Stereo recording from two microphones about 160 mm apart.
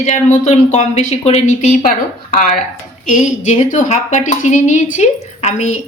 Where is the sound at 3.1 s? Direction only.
50° left (ahead or behind).